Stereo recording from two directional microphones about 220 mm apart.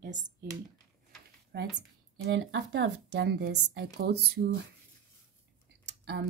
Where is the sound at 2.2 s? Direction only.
55° right (ahead or behind).